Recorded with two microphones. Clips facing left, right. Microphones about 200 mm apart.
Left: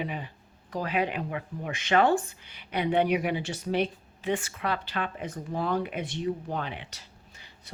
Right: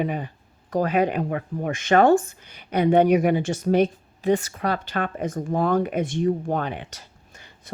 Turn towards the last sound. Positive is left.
turn(degrees=-50)  # may be behind; listen again after turning